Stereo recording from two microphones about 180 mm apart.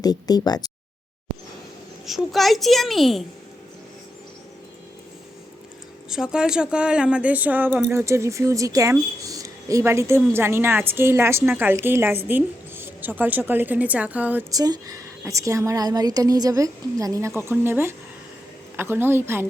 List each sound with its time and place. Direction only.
0.0 s speech: 20° left (ahead or behind)
2.0 s a child's voice: centre (ahead or behind)
6.1 s a woman's voice: 5° right (ahead or behind)
14.5 s a woman's voice: 20° right (ahead or behind)